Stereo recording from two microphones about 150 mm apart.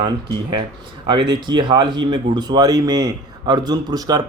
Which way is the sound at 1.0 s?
30° right (ahead or behind).